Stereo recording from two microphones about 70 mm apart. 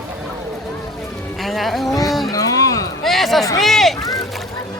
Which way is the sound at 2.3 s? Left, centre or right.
Left.